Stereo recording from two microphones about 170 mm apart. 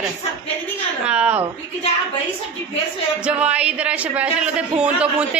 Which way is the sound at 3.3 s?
5° right (ahead or behind).